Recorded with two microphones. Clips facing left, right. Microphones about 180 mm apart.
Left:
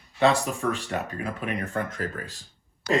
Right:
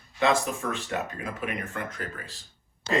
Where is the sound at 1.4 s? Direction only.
35° left (ahead or behind).